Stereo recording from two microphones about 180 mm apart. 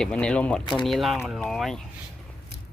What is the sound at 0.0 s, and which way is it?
Speech, 5° left (ahead or behind).